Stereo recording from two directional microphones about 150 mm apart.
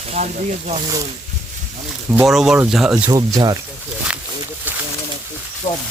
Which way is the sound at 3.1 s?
25° right (ahead or behind).